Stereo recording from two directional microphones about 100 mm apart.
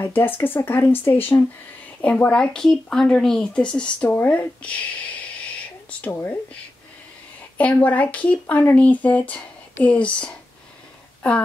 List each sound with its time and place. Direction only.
0.0 s speech: 20° left (ahead or behind)